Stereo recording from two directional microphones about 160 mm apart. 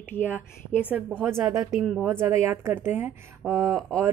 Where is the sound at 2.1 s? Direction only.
15° right (ahead or behind).